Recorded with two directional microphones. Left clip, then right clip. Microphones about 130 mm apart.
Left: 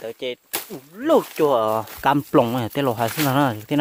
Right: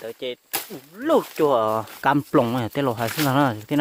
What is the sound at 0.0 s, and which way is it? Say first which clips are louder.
Speech: left 2 dB; 15° left (ahead or behind).